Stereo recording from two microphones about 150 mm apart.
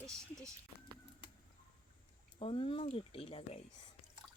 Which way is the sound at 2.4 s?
35° left (ahead or behind).